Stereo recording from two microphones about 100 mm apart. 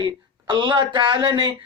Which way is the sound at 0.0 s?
55° right (ahead or behind).